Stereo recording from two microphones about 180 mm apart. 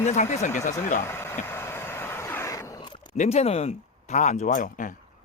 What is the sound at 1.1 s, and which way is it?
Vehicle, 15° left (ahead or behind).